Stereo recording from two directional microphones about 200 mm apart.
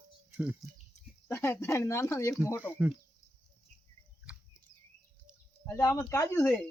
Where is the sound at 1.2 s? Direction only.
10° left (ahead or behind).